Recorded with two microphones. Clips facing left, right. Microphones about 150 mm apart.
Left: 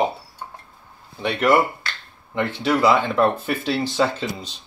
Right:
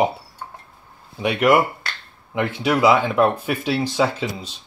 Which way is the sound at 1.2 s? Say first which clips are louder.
Right 1 dB; 10° right (ahead or behind).